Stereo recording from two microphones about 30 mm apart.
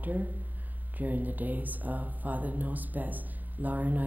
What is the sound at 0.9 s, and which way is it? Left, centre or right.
A woman's voice, right.